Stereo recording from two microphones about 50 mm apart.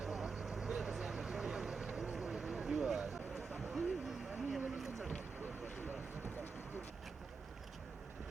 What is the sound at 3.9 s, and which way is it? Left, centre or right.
Vehicle, centre.